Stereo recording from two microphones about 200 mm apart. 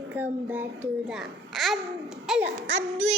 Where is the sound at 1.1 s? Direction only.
Centre (ahead or behind).